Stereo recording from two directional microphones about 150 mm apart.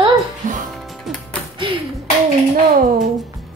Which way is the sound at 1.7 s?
35° right (ahead or behind).